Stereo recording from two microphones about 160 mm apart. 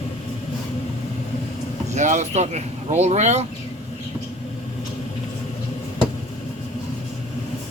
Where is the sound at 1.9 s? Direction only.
45° right (ahead or behind).